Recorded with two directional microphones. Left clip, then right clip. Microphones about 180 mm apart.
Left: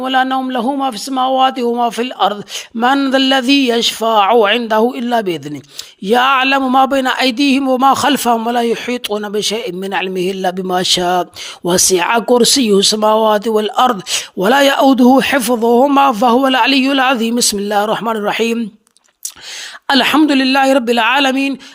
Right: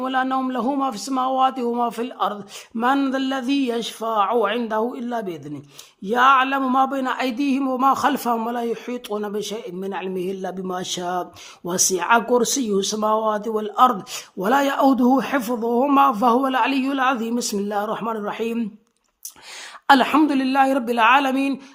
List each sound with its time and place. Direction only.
0.0 s a man's voice: 20° left (ahead or behind)
2.8 s a sound: 5° left (ahead or behind)
3.1 s speech: 25° left (ahead or behind)
19.9 s speech: 25° left (ahead or behind)